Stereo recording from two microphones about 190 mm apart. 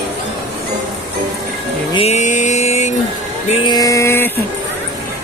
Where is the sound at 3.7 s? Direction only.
15° left (ahead or behind).